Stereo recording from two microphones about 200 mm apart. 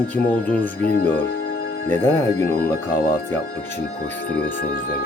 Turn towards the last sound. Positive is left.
turn(degrees=50)  # may be behind; listen again after turning